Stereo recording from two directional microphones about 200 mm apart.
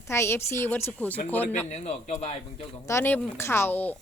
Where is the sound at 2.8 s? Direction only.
10° left (ahead or behind).